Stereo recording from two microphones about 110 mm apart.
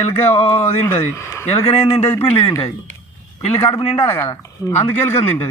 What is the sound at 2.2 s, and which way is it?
Speech, 60° left (ahead or behind).